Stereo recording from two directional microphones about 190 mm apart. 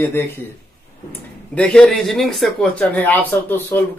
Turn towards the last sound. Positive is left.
turn(degrees=10)  # may be behind; listen again after turning